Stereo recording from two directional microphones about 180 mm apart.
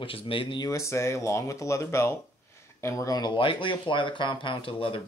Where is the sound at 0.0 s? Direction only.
30° left (ahead or behind).